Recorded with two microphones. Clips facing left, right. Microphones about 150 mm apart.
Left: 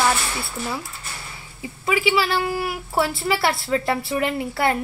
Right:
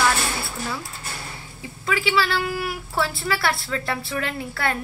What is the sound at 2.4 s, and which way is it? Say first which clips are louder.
A woman's voice: left 2 dB; 30° left (ahead or behind).